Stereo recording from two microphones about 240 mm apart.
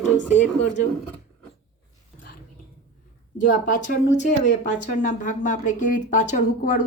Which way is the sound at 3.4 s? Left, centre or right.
Left.